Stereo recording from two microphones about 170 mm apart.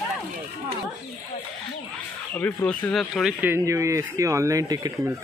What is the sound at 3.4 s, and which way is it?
Speech, 15° right (ahead or behind).